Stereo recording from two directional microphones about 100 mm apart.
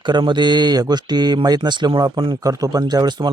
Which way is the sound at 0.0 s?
50° right (ahead or behind).